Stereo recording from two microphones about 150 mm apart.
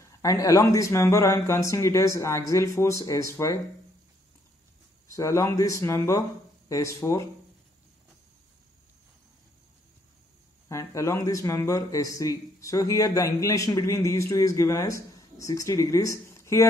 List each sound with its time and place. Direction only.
0.0 s a man's voice: 20° left (ahead or behind)
5.0 s a man's voice: 20° left (ahead or behind)
10.7 s a man's voice: 20° left (ahead or behind)